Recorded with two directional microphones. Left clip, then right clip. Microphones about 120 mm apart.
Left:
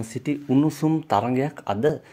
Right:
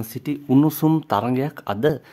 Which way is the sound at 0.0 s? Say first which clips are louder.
Even; 10° right (ahead or behind).